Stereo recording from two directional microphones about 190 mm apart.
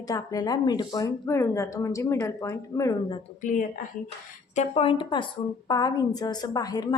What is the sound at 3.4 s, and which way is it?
A woman's voice, 40° left (ahead or behind).